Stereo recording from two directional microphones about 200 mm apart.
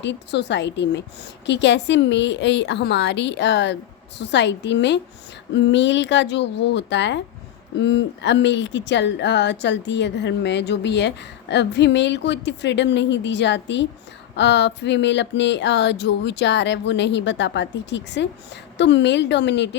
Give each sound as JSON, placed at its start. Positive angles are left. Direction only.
{"t": 0.0, "sound": "speech", "side_deg": 60}